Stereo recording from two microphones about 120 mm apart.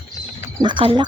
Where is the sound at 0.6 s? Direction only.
40° right (ahead or behind).